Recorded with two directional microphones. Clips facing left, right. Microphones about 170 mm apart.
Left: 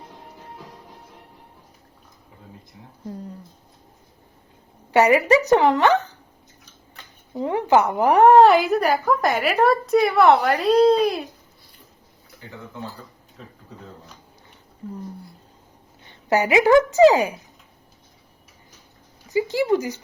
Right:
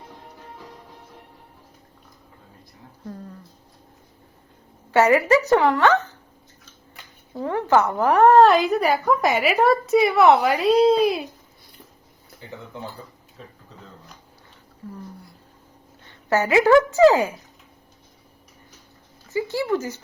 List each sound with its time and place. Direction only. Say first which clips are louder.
4.9 s speech: left 1 dB; 15° left (ahead or behind)
7.3 s a woman's voice: left 1 dB; 15° left (ahead or behind); by 11.3 s centre (ahead or behind)
16.0 s a woman's voice: left 1 dB; 15° left (ahead or behind)
19.3 s speech: left 3 dB; 15° left (ahead or behind)